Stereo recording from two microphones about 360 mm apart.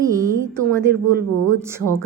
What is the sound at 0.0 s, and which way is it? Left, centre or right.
A woman's voice, centre.